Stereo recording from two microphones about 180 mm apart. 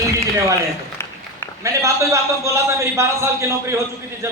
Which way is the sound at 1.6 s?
15° right (ahead or behind).